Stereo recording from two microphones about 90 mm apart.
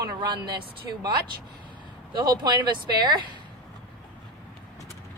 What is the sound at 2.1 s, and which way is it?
Speech, 50° right (ahead or behind).